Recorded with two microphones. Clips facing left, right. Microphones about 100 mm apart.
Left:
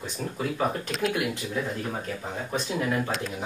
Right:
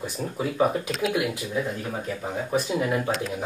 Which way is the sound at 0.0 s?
10° right (ahead or behind).